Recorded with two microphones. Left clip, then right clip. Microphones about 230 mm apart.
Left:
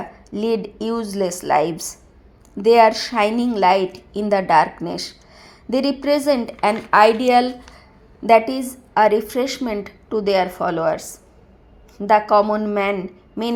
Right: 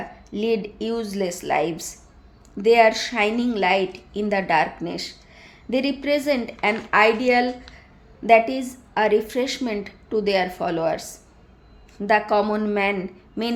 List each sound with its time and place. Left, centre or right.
0.3 s a woman's voice: centre